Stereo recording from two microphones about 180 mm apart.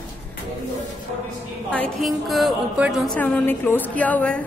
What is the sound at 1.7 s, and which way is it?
Speech, 5° left (ahead or behind).